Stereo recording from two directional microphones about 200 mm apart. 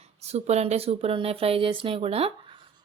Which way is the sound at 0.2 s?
30° right (ahead or behind).